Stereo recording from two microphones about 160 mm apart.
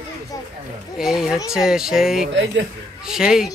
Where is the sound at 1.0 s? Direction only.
Centre (ahead or behind).